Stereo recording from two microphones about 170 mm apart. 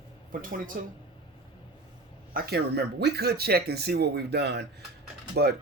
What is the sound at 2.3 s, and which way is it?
Speech, 65° right (ahead or behind).